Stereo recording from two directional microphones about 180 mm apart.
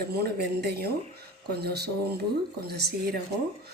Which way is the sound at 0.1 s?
60° right (ahead or behind).